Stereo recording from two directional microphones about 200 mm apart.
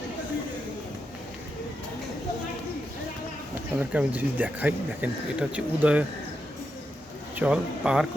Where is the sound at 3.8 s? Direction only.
10° right (ahead or behind).